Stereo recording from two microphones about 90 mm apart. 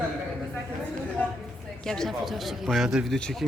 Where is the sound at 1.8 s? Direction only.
5° left (ahead or behind).